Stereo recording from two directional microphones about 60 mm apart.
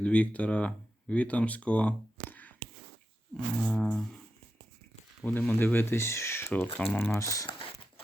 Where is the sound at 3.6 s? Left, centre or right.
Centre.